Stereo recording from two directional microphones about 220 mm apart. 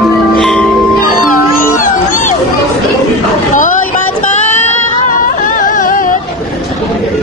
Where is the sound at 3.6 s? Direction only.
35° left (ahead or behind).